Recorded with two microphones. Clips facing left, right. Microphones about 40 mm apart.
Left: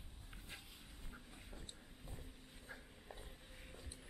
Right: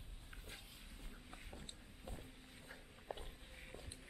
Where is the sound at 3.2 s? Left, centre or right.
Centre.